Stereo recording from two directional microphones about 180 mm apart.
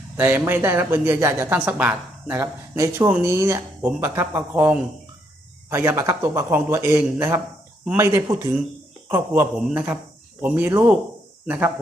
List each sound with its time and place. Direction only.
0.2 s speech: 10° right (ahead or behind)